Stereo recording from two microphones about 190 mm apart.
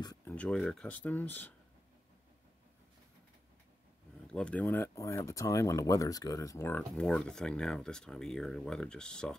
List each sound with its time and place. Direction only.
0.0 s a sound: 20° left (ahead or behind)
0.3 s speech: 5° left (ahead or behind)
4.3 s speech: 5° left (ahead or behind)